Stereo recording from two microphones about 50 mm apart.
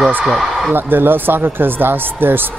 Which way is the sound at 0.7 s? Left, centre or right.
Right.